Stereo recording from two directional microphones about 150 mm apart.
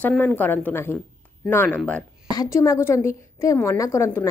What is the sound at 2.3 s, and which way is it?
A woman's voice, 25° left (ahead or behind).